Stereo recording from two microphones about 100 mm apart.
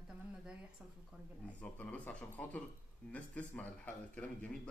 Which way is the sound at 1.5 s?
15° left (ahead or behind).